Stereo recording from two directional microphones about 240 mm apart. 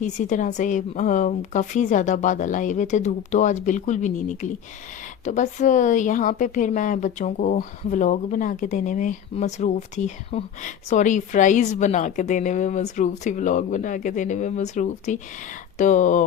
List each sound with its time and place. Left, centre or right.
0.0 s a woman's voice: left